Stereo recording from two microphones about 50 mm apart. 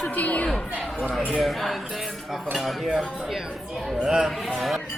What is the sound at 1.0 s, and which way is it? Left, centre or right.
Speech, centre.